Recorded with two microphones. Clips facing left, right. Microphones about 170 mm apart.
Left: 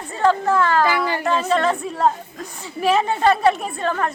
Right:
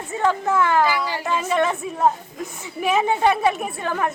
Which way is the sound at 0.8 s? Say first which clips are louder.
Left 2 dB; 55° left (ahead or behind).